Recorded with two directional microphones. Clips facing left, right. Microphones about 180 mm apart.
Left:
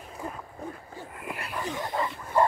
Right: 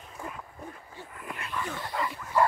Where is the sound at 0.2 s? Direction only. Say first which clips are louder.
Left 3 dB; 35° left (ahead or behind).